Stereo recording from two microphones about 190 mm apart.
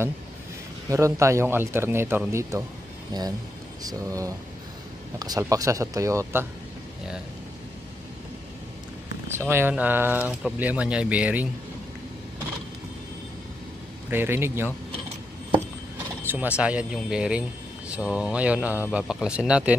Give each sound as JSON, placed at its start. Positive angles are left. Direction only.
{"t": 0.8, "sound": "speech", "side_deg": -15}
{"t": 9.3, "sound": "speech", "side_deg": -10}
{"t": 14.1, "sound": "speech", "side_deg": -10}
{"t": 16.3, "sound": "speech", "side_deg": -10}